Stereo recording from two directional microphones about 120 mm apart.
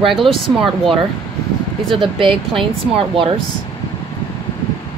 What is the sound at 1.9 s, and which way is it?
Speech, 45° right (ahead or behind).